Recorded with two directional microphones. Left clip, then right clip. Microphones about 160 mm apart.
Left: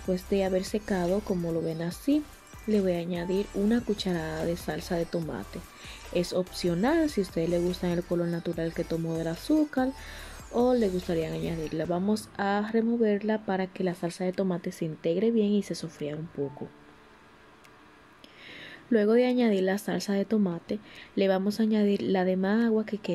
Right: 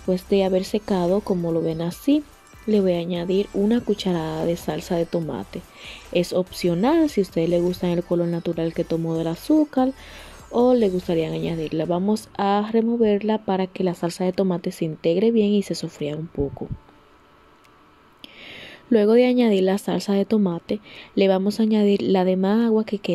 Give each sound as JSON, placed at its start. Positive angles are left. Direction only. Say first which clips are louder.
{"t": 0.0, "sound": "speech", "louder": "right 7 dB", "side_deg": -20}
{"t": 18.5, "sound": "speech", "louder": "right 7 dB", "side_deg": -20}